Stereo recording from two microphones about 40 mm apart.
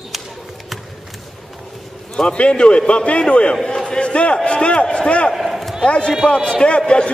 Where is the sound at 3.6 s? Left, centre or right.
Centre.